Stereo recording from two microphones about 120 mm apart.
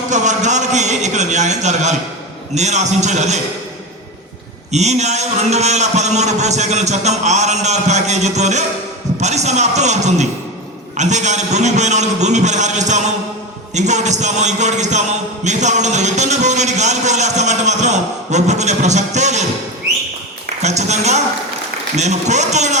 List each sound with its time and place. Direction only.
0.1 s a man's voice: 80° right
4.7 s a man's voice: 70° right (ahead or behind)
20.6 s a man's voice: 70° right (ahead or behind)